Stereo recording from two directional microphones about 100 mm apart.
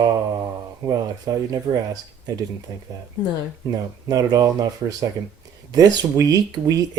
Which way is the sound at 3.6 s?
40° right (ahead or behind).